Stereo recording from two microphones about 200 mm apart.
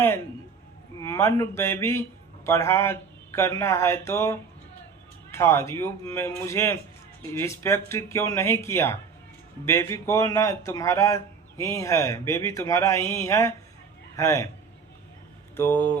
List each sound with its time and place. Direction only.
1.0 s a man's voice: 15° left (ahead or behind)
15.5 s a man's voice: 10° left (ahead or behind)